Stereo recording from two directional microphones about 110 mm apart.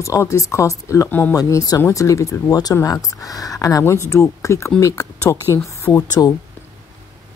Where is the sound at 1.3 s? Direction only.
35° left (ahead or behind).